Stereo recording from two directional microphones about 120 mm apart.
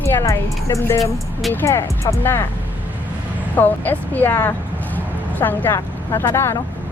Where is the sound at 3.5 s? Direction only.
15° left (ahead or behind).